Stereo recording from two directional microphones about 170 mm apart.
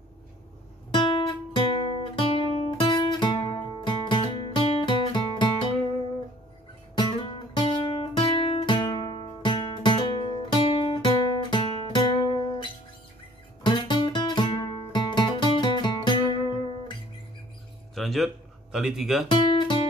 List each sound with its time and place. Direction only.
0.9 s guitar: 30° left (ahead or behind)
7.0 s music: 30° left (ahead or behind)
13.6 s music: 25° left (ahead or behind)
17.9 s a sound: centre (ahead or behind)
19.2 s guitar: 30° left (ahead or behind)